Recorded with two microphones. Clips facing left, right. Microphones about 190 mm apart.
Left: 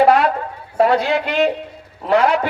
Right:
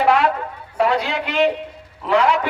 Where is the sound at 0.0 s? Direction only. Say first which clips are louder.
Left 3 dB; 40° left (ahead or behind).